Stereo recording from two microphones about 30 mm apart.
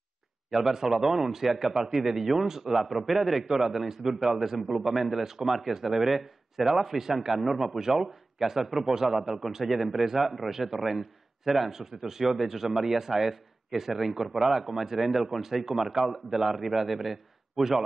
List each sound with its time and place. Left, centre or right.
0.5 s a man's voice: centre
5.2 s a man's voice: centre
5.5 s a man's voice: centre
9.1 s a man's voice: centre